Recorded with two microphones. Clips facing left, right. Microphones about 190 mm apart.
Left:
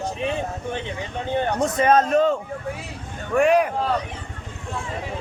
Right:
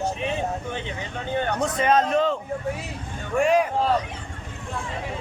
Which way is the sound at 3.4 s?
60° left (ahead or behind).